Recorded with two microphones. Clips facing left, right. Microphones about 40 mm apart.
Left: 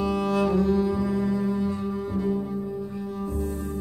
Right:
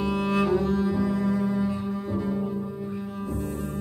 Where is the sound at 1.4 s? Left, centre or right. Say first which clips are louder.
Even; centre.